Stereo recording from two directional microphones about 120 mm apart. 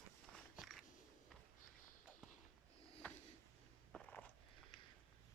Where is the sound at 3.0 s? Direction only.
15° left (ahead or behind).